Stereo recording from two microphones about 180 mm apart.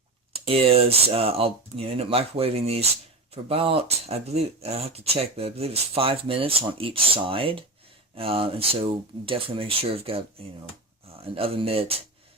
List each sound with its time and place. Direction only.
0.4 s speech: 35° right (ahead or behind)